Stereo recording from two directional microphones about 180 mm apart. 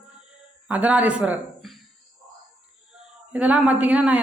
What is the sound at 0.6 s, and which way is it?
Speech, 5° right (ahead or behind).